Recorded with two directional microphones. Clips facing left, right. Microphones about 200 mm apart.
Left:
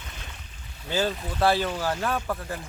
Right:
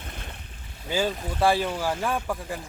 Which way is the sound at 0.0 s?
55° right (ahead or behind).